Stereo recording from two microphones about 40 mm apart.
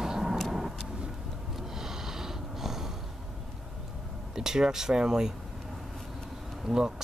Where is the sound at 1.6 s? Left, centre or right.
Centre.